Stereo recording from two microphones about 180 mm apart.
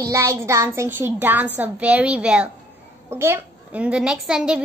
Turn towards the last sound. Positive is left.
turn(degrees=-5)  # may be behind; listen again after turning